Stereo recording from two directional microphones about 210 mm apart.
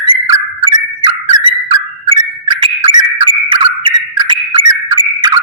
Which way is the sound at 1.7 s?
25° right (ahead or behind).